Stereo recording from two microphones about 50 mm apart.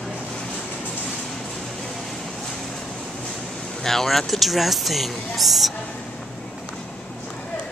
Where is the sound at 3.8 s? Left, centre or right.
Centre.